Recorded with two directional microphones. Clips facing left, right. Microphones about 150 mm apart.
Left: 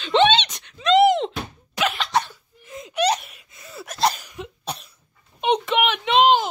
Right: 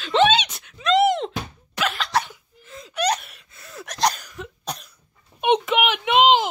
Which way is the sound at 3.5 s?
10° left (ahead or behind).